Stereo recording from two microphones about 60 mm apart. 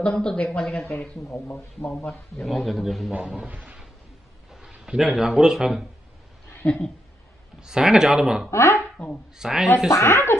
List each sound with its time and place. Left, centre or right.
0.0 s speech: centre
2.3 s speech: centre
3.4 s a sound: right
4.6 s speech: centre
6.6 s speech: centre
7.6 s speech: centre
8.5 s speech: left
9.4 s speech: centre
9.8 s speech: left